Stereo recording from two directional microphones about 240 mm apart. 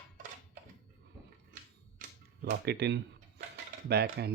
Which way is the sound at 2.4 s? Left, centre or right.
Right.